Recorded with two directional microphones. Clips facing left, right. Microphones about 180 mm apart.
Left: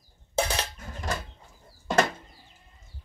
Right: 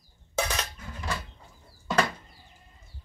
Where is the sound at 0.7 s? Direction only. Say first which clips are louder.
Left 2 dB; 40° left (ahead or behind).